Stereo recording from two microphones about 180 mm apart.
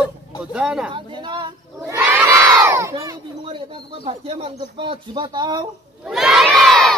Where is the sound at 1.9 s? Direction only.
10° right (ahead or behind).